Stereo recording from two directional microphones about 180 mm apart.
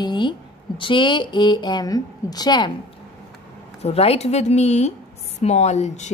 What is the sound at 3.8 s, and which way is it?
Speech, 35° left (ahead or behind).